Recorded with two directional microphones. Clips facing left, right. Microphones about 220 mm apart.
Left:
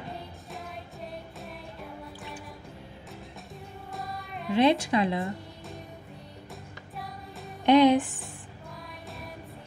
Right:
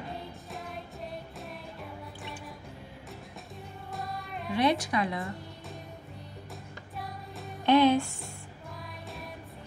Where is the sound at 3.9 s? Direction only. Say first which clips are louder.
Right 1 dB; centre (ahead or behind).